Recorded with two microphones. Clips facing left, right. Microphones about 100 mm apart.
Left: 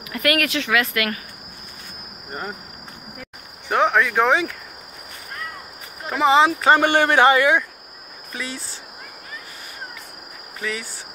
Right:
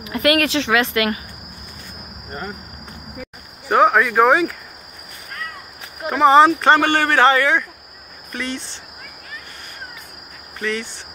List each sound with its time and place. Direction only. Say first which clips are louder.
0.0 s speech: right 4 dB; 25° right (ahead or behind)
3.6 s speech: right 4 dB; 5° right (ahead or behind)
6.0 s speech: right 4 dB; centre (ahead or behind)
6.8 s speech: even; 15° left (ahead or behind)
10.6 s speech: right 4 dB; 5° left (ahead or behind)